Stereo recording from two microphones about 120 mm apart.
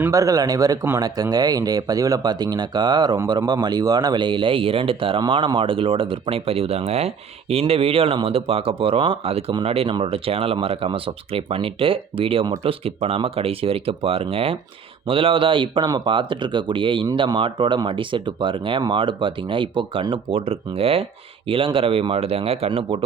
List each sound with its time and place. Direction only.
0.1 s speech: 30° right (ahead or behind); by 23.0 s 50° right (ahead or behind)